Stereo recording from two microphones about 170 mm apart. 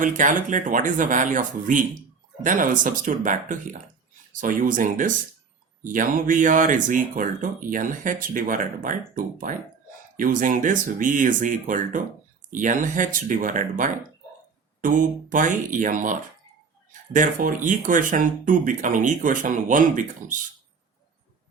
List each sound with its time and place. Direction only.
0.0 s speech: 50° right (ahead or behind)